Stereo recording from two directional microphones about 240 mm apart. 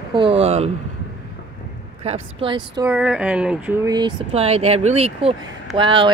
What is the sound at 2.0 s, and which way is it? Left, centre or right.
Speech, right.